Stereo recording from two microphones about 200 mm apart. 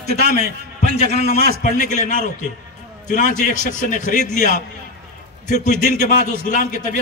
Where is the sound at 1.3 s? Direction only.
50° right (ahead or behind).